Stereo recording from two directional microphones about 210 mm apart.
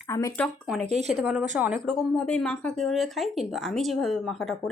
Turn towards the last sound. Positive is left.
turn(degrees=0)  # may be behind; listen again after turning